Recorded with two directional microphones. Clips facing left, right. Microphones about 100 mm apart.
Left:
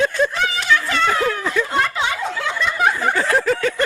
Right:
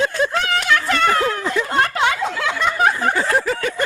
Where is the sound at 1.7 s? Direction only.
55° right (ahead or behind); by 2.7 s 90° right.